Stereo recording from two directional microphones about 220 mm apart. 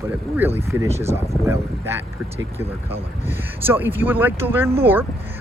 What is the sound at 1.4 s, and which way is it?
Speech, 10° right (ahead or behind).